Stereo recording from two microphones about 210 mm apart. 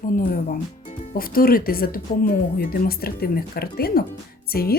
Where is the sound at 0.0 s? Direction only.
40° left (ahead or behind).